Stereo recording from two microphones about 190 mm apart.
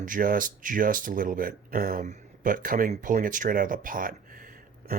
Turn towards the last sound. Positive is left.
turn(degrees=-50)  # may be behind; listen again after turning